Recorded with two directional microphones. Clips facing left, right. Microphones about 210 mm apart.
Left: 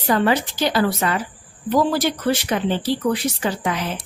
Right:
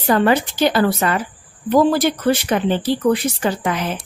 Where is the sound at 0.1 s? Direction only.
55° right (ahead or behind).